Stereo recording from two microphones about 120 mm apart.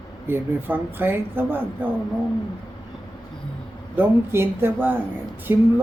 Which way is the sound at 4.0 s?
20° right (ahead or behind).